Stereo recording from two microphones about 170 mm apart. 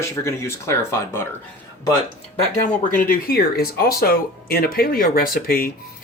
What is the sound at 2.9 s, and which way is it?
Speech, 55° left (ahead or behind).